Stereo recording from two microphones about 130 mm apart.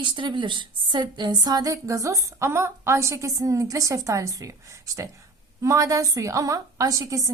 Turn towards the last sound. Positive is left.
turn(degrees=-25)  # may be behind; listen again after turning